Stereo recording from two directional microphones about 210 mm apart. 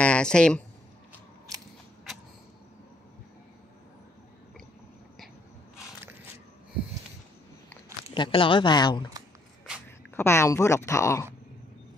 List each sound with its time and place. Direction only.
0.0 s speech: 5° left (ahead or behind)
8.1 s speech: 25° left (ahead or behind)
10.1 s speech: 10° left (ahead or behind)